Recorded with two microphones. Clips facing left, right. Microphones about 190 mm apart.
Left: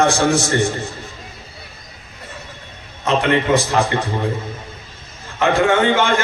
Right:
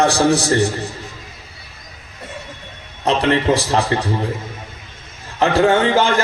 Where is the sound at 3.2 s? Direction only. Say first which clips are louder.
Left 1 dB; 35° right (ahead or behind).